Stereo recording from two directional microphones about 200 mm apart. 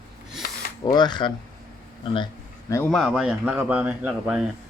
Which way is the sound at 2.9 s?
Centre (ahead or behind).